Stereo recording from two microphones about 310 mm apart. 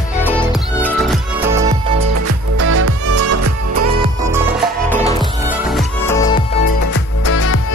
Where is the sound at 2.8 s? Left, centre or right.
Right.